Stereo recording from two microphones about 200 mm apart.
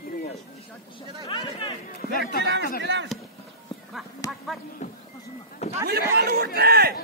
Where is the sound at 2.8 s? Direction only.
60° right (ahead or behind).